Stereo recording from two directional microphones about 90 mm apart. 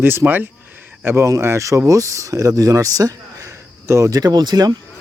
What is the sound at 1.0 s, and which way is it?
Speech, 35° right (ahead or behind).